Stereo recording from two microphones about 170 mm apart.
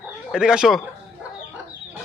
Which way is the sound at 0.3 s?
5° right (ahead or behind).